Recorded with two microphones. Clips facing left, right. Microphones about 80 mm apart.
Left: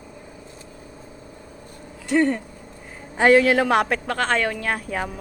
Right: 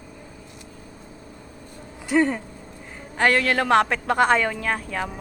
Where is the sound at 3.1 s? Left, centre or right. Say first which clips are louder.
Left 5 dB; centre.